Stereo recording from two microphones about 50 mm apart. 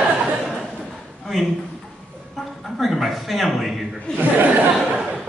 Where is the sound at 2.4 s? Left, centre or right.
Centre.